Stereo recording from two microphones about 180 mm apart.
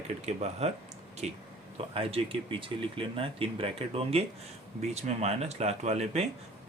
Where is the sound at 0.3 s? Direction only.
40° right (ahead or behind).